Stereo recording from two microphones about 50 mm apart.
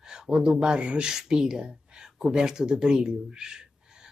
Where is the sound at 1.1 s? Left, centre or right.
Centre.